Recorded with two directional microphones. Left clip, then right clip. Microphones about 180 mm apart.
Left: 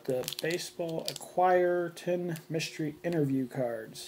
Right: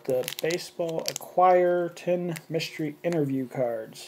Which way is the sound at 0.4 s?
10° right (ahead or behind).